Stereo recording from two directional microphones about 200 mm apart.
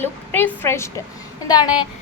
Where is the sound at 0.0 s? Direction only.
10° left (ahead or behind).